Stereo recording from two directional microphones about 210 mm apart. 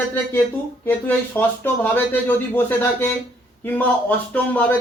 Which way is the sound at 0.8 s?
10° left (ahead or behind).